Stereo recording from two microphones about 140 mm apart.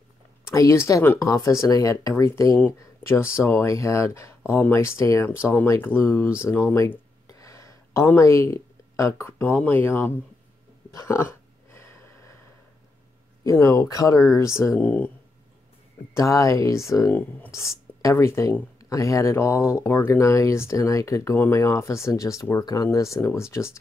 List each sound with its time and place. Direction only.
0.5 s speech: 20° left (ahead or behind)
10.9 s a sound: 20° left (ahead or behind)
13.4 s speech: 20° left (ahead or behind)
16.2 s speech: 20° left (ahead or behind)